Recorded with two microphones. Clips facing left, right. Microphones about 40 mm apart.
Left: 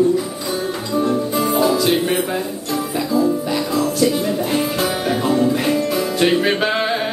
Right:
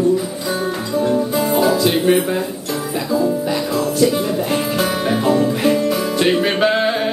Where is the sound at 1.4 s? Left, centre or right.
Centre.